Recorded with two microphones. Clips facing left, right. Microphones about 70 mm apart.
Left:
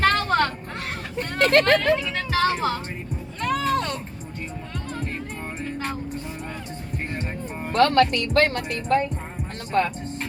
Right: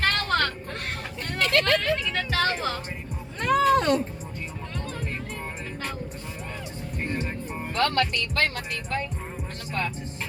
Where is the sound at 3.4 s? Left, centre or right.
Right.